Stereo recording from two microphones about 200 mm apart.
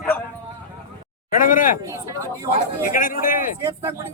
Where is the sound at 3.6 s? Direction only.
15° right (ahead or behind).